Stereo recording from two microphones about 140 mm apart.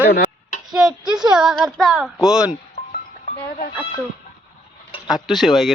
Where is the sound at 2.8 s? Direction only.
65° left (ahead or behind).